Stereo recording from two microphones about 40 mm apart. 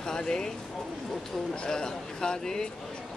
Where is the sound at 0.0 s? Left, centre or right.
Centre.